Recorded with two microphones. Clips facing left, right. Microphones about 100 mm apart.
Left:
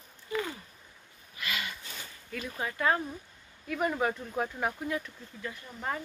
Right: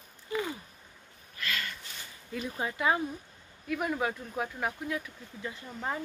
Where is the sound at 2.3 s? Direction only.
20° right (ahead or behind).